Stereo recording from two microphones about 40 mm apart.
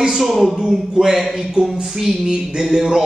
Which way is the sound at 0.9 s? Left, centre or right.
Centre.